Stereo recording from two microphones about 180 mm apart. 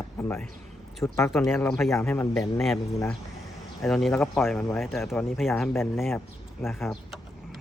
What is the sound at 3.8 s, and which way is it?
Speech, centre (ahead or behind).